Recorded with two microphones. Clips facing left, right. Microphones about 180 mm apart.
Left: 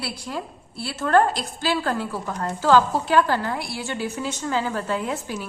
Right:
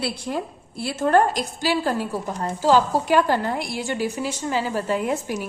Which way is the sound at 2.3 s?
25° right (ahead or behind).